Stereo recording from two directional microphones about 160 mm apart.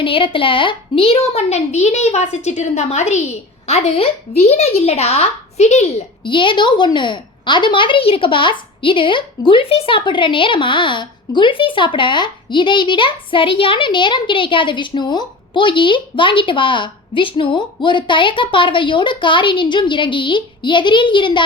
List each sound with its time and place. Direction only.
0.0 s a woman's voice: 35° left (ahead or behind)
6.2 s a woman's voice: 30° left (ahead or behind)